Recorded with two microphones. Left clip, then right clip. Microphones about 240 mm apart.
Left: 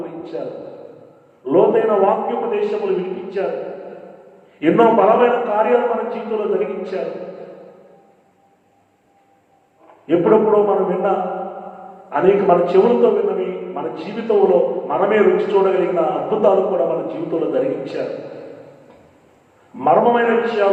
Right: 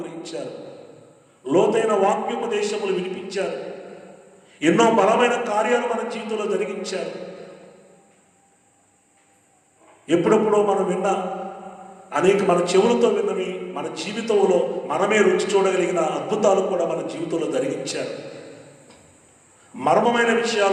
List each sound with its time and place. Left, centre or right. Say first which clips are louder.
0.0 s a sound: left 4 dB; right
1.5 s a man's voice: left 4 dB; right
4.6 s a man's voice: left 4 dB; right
10.1 s a man's voice: left 4 dB; right
12.1 s a man's voice: left 4 dB; right
19.7 s a man's voice: left 4 dB; right